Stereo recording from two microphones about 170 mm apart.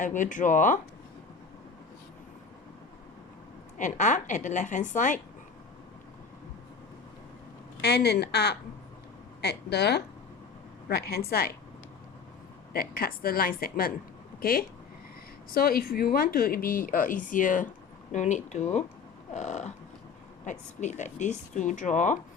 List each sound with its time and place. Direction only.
0.0 s a woman's voice: 50° left (ahead or behind)
3.8 s a woman's voice: 45° left (ahead or behind)
7.8 s a woman's voice: 75° left (ahead or behind)
10.8 s a woman's voice: 65° left (ahead or behind)
12.7 s a woman's voice: 60° left (ahead or behind)
15.5 s a woman's voice: 60° left (ahead or behind)